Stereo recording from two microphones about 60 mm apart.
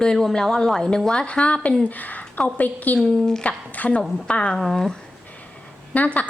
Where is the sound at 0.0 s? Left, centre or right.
Centre; by 3.0 s left.